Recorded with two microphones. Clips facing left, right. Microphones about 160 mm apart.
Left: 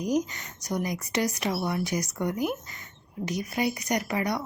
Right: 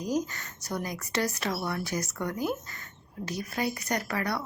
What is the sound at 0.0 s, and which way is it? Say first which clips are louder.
Speech: left 3 dB; 15° left (ahead or behind).